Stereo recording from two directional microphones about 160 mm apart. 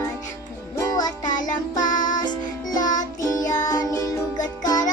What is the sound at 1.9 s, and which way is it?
Music, 55° left (ahead or behind).